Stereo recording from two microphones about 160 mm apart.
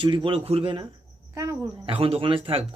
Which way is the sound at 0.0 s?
30° right (ahead or behind).